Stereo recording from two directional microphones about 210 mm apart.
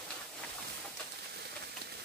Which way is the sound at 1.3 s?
50° right (ahead or behind).